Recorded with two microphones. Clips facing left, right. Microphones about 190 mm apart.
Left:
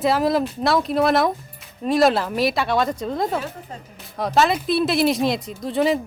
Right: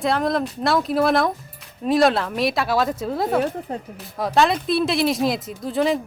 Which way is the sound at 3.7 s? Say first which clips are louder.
Right 8 dB; 60° right (ahead or behind).